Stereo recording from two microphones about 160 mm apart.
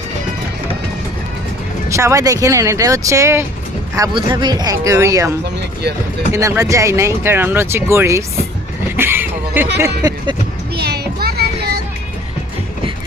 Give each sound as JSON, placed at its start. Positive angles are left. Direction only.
{"t": 1.9, "sound": "speech", "side_deg": -20}
{"t": 6.3, "sound": "speech", "side_deg": -20}
{"t": 9.0, "sound": "a sound", "side_deg": -15}
{"t": 9.8, "sound": "speech", "side_deg": -20}
{"t": 10.8, "sound": "child singing", "side_deg": -85}